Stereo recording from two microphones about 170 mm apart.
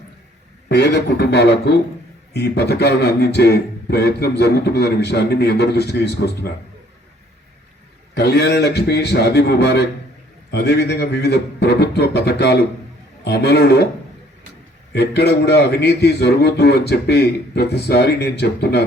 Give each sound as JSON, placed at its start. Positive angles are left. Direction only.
{"t": 0.7, "sound": "a man's voice", "side_deg": 80}
{"t": 8.1, "sound": "a man's voice", "side_deg": 75}
{"t": 14.9, "sound": "a man's voice", "side_deg": 75}